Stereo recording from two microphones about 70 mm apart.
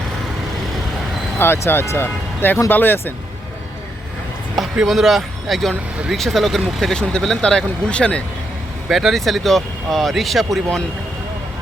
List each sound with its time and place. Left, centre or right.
1.4 s speech: left
4.5 s speech: centre
8.9 s speech: centre